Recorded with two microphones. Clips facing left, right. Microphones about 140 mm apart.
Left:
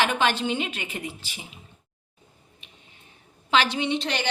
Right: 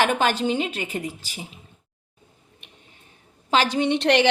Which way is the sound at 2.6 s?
60° right (ahead or behind).